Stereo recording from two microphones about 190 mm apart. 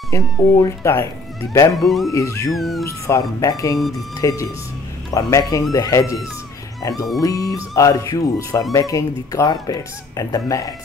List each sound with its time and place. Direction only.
0.1 s speech: 15° left (ahead or behind)
1.7 s speech: centre (ahead or behind)
2.1 s speech: 15° left (ahead or behind)
2.5 s speech: centre (ahead or behind)
2.8 s speech: 15° left (ahead or behind)
3.7 s speech: centre (ahead or behind)
4.2 s speech: 20° left (ahead or behind)